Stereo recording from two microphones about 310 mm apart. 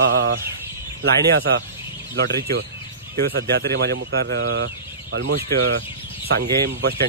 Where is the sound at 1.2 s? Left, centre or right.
Right.